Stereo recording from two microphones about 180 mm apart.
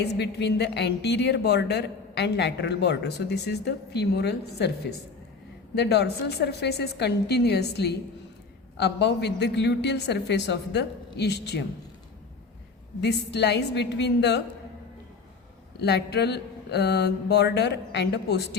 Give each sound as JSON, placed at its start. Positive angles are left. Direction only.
{"t": 0.0, "sound": "a woman's voice", "side_deg": 70}
{"t": 13.0, "sound": "a woman's voice", "side_deg": 70}
{"t": 15.8, "sound": "a woman's voice", "side_deg": 70}